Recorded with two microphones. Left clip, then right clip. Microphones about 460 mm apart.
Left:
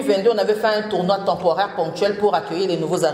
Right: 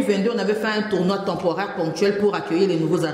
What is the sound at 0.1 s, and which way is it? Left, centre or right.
A man's voice, left.